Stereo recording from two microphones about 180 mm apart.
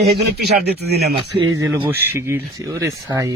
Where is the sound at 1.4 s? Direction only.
20° right (ahead or behind).